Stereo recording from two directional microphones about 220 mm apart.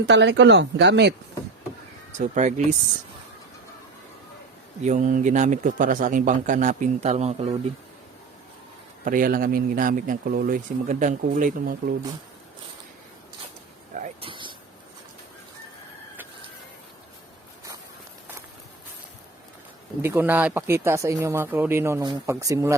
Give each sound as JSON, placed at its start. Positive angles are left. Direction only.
{"t": 0.0, "sound": "speech", "side_deg": -50}
{"t": 2.1, "sound": "speech", "side_deg": -35}
{"t": 4.8, "sound": "speech", "side_deg": -35}
{"t": 9.0, "sound": "speech", "side_deg": -40}
{"t": 13.9, "sound": "a sound", "side_deg": -25}
{"t": 20.0, "sound": "speech", "side_deg": -10}